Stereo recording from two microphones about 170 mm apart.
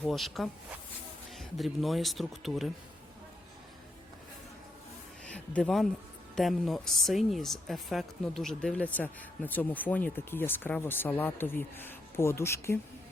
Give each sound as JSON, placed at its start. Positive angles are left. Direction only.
{"t": 0.0, "sound": "speech", "side_deg": 0}
{"t": 5.2, "sound": "speech", "side_deg": 5}